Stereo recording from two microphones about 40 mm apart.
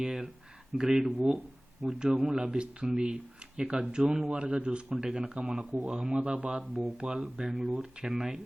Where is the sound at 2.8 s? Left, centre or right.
Centre.